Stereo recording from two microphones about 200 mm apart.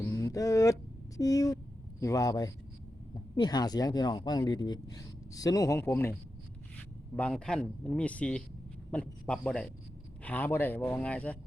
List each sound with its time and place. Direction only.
0.0 s a sound: 15° left (ahead or behind)
2.0 s speech: 15° left (ahead or behind)
7.2 s speech: 5° left (ahead or behind)